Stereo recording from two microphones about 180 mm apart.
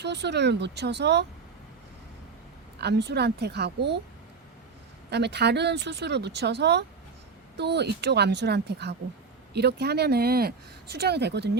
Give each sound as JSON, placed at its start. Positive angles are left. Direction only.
{"t": 0.0, "sound": "speech", "side_deg": -70}
{"t": 2.8, "sound": "speech", "side_deg": -65}
{"t": 5.1, "sound": "speech", "side_deg": -70}